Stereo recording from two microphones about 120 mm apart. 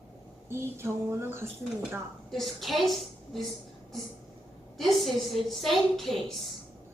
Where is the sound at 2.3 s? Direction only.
Centre (ahead or behind).